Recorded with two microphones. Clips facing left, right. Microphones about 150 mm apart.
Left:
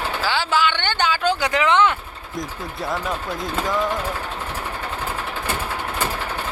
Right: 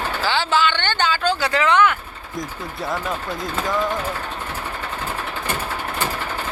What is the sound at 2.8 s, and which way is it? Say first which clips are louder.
Speech: even; centre (ahead or behind).